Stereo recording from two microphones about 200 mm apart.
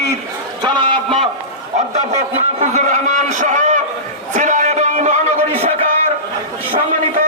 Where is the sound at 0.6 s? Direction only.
25° right (ahead or behind).